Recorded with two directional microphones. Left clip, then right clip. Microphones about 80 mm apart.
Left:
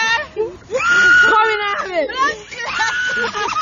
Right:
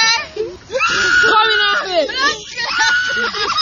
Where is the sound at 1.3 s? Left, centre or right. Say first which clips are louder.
Right 2 dB; centre.